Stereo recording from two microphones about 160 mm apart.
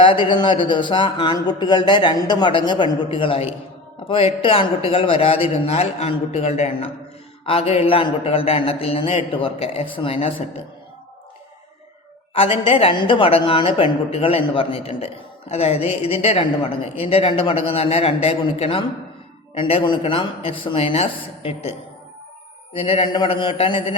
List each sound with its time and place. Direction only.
0.0 s a woman's voice: 30° left (ahead or behind)
12.3 s a woman's voice: 35° left (ahead or behind)